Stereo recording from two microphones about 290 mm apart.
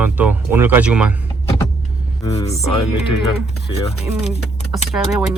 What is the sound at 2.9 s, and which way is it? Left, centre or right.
Speech, left.